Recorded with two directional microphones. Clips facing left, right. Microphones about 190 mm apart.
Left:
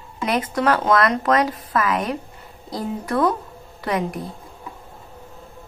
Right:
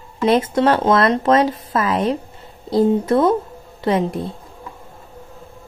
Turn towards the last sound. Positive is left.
turn(degrees=-25)  # may be behind; listen again after turning